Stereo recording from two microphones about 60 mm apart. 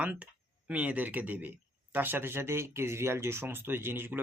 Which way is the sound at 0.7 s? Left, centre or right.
Right.